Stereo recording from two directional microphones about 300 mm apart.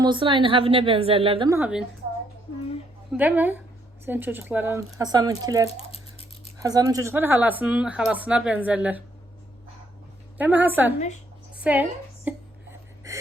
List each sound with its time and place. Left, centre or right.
0.0 s a woman's voice: centre
3.1 s a woman's voice: centre
5.6 s a sound: centre
6.6 s speech: centre
10.3 s speech: centre
11.5 s a sound: centre
13.1 s gasp: centre